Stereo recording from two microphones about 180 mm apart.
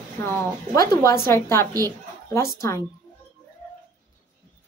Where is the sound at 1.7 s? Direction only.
20° right (ahead or behind).